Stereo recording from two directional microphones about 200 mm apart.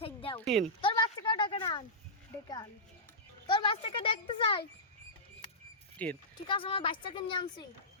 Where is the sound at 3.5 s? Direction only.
25° left (ahead or behind).